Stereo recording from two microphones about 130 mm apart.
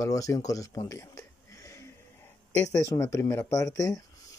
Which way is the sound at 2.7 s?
25° left (ahead or behind).